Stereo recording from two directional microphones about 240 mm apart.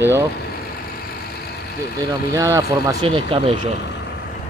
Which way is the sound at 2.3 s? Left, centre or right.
Centre.